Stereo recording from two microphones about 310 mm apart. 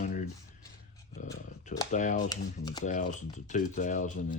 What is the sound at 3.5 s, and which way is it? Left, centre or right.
Speech, left.